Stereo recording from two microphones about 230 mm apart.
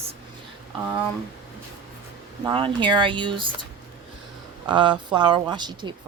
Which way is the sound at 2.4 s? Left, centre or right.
Right.